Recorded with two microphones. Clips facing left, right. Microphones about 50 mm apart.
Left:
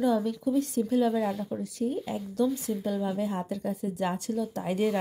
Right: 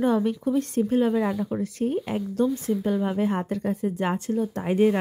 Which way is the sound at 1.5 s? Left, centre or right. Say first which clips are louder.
Right 5 dB; right.